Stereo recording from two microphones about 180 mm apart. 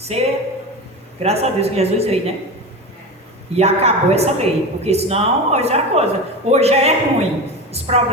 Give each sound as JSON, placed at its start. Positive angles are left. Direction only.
{"t": 0.0, "sound": "speech", "side_deg": -35}
{"t": 3.5, "sound": "speech", "side_deg": -35}